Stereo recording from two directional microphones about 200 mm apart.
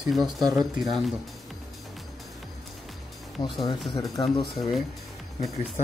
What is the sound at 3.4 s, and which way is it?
Speech, 25° left (ahead or behind).